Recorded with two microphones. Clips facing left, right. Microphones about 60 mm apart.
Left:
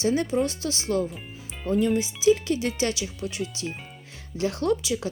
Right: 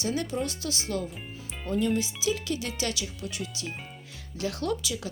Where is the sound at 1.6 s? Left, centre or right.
Centre.